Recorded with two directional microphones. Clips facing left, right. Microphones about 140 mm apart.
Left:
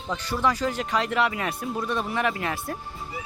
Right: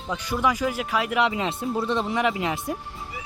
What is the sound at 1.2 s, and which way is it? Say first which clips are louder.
Speech: right 2 dB; 20° right (ahead or behind).